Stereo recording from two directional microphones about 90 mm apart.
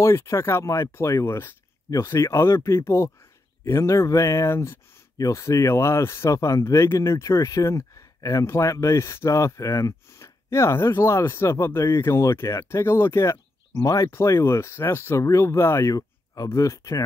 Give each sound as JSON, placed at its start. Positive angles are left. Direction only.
{"t": 0.0, "sound": "speech", "side_deg": 30}
{"t": 13.8, "sound": "speech", "side_deg": 40}
{"t": 14.1, "sound": "speech", "side_deg": 30}